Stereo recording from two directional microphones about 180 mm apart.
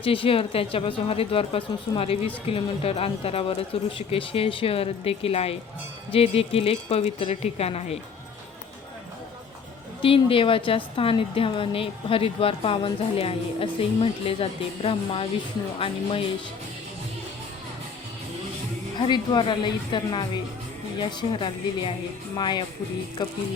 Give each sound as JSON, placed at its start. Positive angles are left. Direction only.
{"t": 0.0, "sound": "a woman's voice", "side_deg": 30}
{"t": 10.0, "sound": "a woman's voice", "side_deg": 30}
{"t": 18.9, "sound": "a woman's voice", "side_deg": 25}